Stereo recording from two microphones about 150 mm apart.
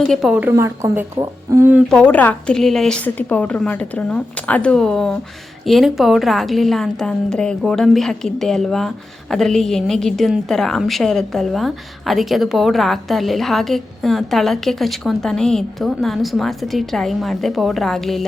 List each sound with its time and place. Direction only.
0.1 s a woman's voice: centre (ahead or behind)
0.4 s speech: 20° right (ahead or behind)
1.9 s a woman's voice: 10° left (ahead or behind)